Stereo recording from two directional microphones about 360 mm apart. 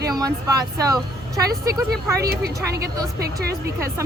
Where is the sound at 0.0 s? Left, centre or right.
Centre.